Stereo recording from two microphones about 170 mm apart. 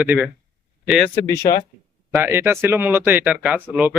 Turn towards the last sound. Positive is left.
turn(degrees=-10)  # may be behind; listen again after turning